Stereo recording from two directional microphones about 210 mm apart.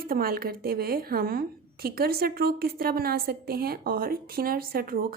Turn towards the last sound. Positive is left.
turn(degrees=-45)  # may be behind; listen again after turning